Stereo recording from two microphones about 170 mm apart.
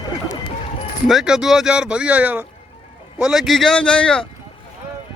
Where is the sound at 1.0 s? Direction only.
Centre (ahead or behind).